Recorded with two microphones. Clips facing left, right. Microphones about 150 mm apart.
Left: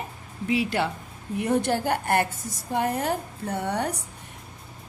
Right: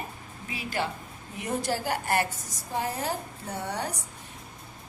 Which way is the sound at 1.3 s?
60° left (ahead or behind).